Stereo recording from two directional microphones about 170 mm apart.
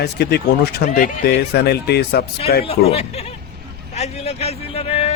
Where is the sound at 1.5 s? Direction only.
75° left (ahead or behind).